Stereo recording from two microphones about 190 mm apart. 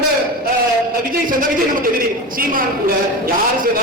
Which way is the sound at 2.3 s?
50° right (ahead or behind).